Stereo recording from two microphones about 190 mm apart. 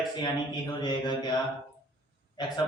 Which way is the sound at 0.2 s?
20° left (ahead or behind).